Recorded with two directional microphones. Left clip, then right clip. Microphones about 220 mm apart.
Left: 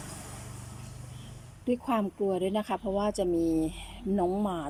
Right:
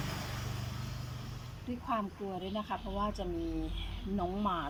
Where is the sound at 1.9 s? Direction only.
40° left (ahead or behind).